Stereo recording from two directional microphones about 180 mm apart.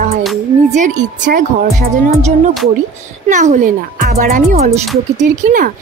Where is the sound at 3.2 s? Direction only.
45° right (ahead or behind).